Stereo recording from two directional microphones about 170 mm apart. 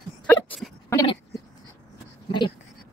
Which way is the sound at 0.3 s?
10° left (ahead or behind).